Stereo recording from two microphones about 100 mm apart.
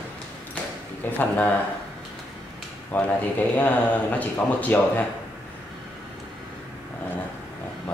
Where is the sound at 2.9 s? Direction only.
15° left (ahead or behind).